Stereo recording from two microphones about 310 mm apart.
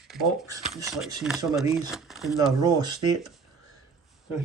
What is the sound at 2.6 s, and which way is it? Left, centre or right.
Speech, centre.